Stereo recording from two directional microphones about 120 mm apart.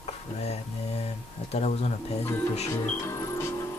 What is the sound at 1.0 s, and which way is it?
Speech, 65° left (ahead or behind).